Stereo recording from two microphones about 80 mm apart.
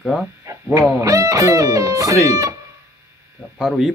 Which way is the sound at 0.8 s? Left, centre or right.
Right.